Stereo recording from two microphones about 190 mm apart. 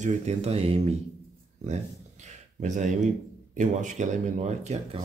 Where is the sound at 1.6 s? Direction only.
35° right (ahead or behind).